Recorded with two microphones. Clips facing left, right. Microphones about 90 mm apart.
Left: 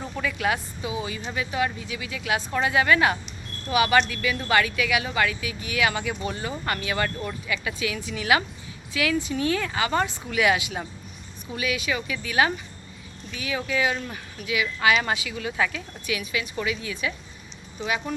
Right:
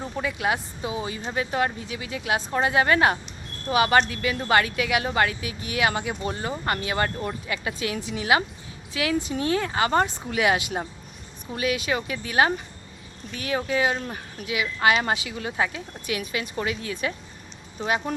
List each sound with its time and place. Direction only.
0.0 s speech: 25° right (ahead or behind)